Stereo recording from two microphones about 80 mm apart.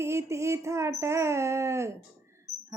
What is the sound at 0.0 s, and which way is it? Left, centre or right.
Speech, right.